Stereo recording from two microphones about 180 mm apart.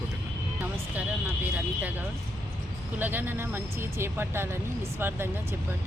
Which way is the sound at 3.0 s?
10° right (ahead or behind).